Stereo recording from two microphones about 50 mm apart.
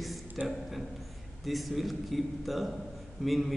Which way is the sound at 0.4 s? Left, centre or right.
Right.